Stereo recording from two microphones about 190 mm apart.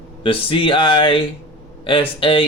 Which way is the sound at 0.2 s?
30° left (ahead or behind).